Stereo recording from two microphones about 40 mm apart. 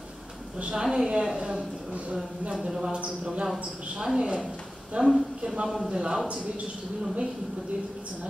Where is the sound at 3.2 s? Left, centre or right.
Right.